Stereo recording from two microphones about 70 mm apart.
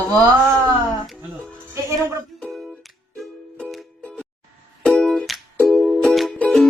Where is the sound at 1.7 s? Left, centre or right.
Right.